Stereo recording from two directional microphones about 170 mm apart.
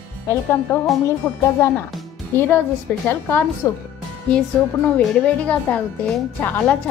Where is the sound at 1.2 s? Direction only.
10° left (ahead or behind).